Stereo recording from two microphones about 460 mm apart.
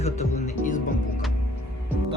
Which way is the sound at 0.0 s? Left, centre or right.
Centre.